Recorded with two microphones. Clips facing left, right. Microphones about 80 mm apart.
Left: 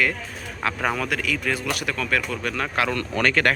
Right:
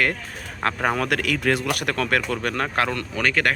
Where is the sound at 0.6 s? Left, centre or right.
Right.